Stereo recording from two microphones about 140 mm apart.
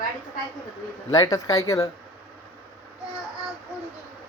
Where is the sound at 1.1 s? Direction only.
30° left (ahead or behind).